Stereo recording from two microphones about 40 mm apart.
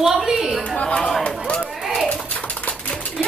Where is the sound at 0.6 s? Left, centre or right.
Left.